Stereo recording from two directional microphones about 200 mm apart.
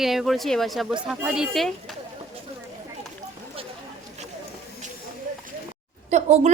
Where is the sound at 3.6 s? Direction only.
30° right (ahead or behind).